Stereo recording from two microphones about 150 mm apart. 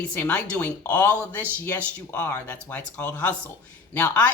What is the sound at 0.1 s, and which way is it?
Speech, 10° left (ahead or behind).